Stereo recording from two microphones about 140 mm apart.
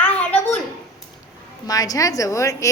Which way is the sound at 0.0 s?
10° left (ahead or behind).